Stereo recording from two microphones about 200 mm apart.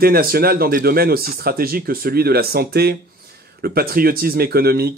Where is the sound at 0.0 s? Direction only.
50° right (ahead or behind).